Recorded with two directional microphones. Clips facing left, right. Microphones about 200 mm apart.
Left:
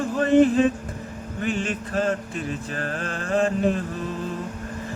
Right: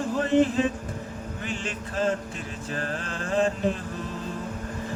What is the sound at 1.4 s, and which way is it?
Music, 55° left (ahead or behind).